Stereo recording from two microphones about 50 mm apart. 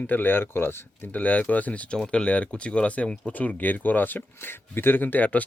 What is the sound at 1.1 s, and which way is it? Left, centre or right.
Speech, left.